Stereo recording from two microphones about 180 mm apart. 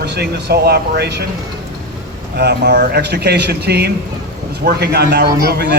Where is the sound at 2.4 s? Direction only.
60° right (ahead or behind).